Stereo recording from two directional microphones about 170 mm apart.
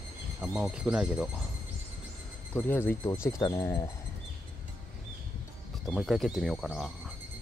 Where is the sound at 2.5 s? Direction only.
10° left (ahead or behind).